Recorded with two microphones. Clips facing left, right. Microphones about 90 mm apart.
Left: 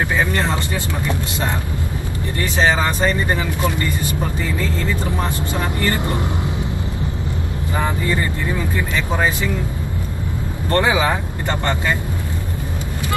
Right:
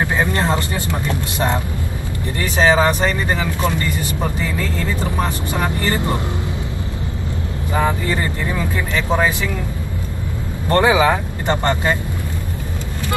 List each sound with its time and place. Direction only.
0.1 s vehicle: 20° right (ahead or behind)
2.5 s speech: 20° right (ahead or behind)
5.2 s speech: 20° right (ahead or behind)
10.7 s speech: 20° right (ahead or behind)